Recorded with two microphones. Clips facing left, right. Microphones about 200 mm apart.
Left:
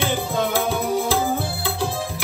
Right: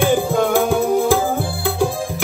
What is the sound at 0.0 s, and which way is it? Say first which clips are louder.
Music: right 7 dB; 50° right (ahead or behind).